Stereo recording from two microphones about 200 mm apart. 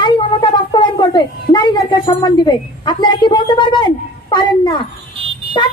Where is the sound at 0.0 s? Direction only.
25° left (ahead or behind).